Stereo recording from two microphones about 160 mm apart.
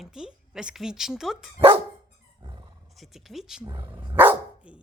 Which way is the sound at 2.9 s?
Centre (ahead or behind).